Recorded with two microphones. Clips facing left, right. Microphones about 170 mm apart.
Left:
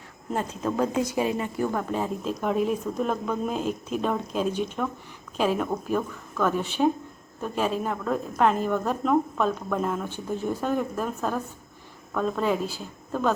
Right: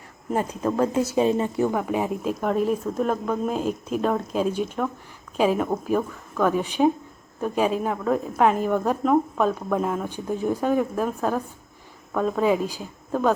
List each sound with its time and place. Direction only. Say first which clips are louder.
0.3 s a woman's voice: right 4 dB; 5° right (ahead or behind)
1.1 s a woman's voice: right 5 dB; 25° right (ahead or behind)
1.7 s a woman's voice: right 3 dB; 10° right (ahead or behind)